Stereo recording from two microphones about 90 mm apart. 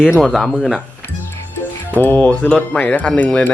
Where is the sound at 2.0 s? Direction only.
20° left (ahead or behind).